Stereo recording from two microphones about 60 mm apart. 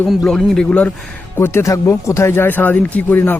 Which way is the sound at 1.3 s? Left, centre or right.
Left.